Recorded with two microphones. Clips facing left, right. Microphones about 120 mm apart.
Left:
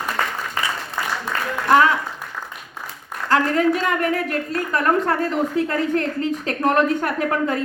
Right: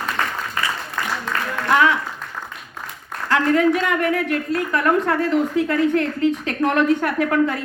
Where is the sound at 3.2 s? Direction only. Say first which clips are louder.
Right 1 dB; 35° left (ahead or behind).